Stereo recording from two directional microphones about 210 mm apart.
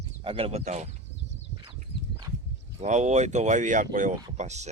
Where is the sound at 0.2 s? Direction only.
25° right (ahead or behind).